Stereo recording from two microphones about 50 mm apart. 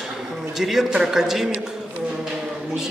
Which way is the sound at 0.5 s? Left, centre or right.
Centre.